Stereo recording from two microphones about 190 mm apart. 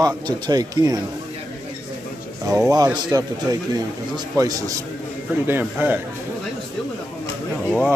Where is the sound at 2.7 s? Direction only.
20° right (ahead or behind).